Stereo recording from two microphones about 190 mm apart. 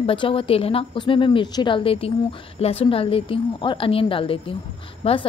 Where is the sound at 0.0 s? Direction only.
30° left (ahead or behind).